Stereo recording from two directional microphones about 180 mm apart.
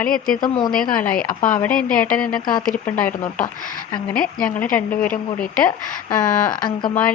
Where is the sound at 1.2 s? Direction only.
50° left (ahead or behind).